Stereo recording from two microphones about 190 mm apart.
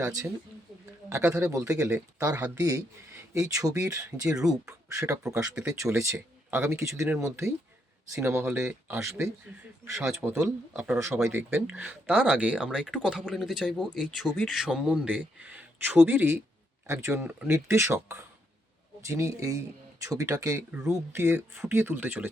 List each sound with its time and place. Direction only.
0.0 s speech: 20° right (ahead or behind)
1.1 s speech: 5° right (ahead or behind)